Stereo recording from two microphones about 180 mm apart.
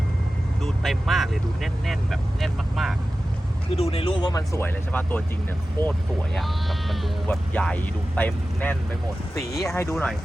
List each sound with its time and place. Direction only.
0.6 s speech: centre (ahead or behind)
3.8 s speech: 35° left (ahead or behind); by 5.2 s 10° left (ahead or behind)
6.3 s speech: centre (ahead or behind)